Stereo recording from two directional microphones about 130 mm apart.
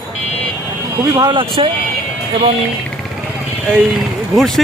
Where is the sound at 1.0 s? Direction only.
25° right (ahead or behind).